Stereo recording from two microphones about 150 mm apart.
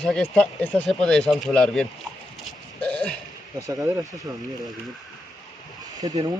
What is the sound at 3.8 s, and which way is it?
Speech, 25° right (ahead or behind).